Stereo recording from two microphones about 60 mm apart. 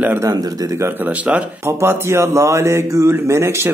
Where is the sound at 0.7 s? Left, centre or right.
Right.